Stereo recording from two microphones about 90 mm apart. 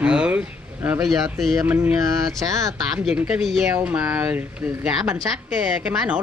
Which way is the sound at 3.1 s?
15° right (ahead or behind).